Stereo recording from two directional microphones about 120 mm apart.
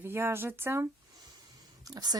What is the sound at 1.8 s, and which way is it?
Speech, 35° right (ahead or behind).